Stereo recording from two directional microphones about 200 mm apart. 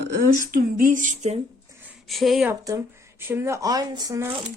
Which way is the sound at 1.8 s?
5° right (ahead or behind).